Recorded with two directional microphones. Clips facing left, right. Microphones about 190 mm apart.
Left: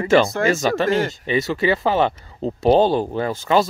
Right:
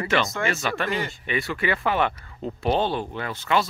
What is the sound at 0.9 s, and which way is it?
Speech, 90° left.